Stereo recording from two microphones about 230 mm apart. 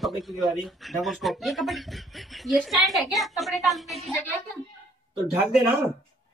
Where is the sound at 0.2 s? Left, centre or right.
Centre.